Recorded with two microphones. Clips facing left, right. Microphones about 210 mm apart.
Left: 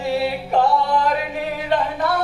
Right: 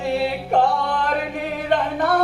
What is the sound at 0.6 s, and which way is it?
Music, 55° right (ahead or behind).